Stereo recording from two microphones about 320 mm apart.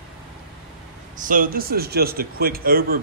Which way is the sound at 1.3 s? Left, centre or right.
Right.